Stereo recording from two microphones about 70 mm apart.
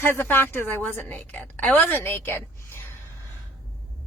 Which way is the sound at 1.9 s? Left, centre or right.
Left.